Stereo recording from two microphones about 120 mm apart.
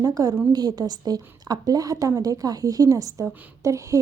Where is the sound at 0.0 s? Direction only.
30° right (ahead or behind).